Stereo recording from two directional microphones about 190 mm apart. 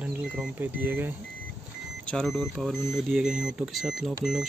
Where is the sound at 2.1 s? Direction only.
Centre (ahead or behind).